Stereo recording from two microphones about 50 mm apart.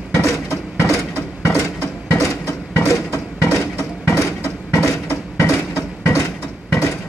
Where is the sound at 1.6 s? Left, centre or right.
Left.